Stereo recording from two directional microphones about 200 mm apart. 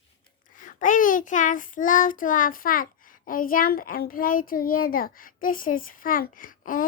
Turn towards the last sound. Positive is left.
turn(degrees=45)  # may be behind; listen again after turning